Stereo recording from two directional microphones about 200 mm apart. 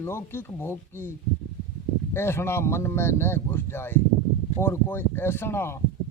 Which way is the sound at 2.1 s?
10° left (ahead or behind).